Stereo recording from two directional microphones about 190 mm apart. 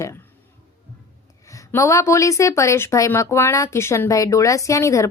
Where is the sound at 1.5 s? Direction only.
15° left (ahead or behind).